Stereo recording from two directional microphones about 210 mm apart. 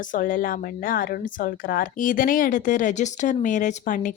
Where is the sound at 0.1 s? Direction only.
40° left (ahead or behind).